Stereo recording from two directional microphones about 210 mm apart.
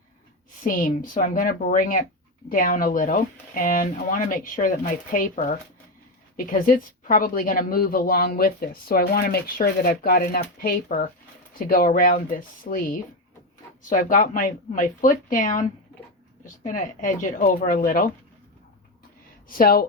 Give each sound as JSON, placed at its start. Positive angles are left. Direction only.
{"t": 0.6, "sound": "speech", "side_deg": 40}
{"t": 19.5, "sound": "speech", "side_deg": 45}